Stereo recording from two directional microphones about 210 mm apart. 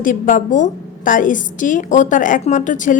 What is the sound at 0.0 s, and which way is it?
A woman's voice, 40° left (ahead or behind).